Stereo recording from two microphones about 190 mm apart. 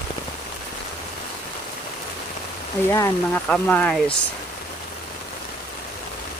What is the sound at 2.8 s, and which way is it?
Speech, 10° left (ahead or behind).